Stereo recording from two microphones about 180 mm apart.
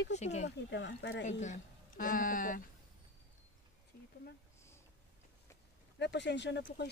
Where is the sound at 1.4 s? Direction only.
45° left (ahead or behind).